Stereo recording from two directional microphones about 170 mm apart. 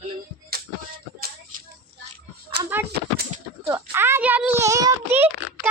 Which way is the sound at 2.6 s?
75° right (ahead or behind).